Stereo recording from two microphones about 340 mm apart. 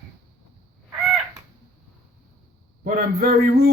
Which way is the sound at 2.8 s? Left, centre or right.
Right.